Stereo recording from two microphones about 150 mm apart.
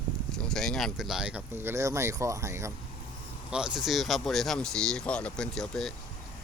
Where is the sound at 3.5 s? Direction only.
5° right (ahead or behind).